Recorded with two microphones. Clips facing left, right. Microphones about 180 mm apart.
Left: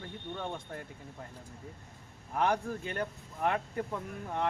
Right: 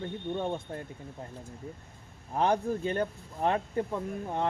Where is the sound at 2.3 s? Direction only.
25° right (ahead or behind).